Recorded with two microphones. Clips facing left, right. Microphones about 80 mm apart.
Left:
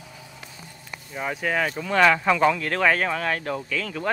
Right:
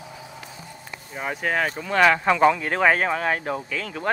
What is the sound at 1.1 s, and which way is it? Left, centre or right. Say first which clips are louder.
Speech: even; centre.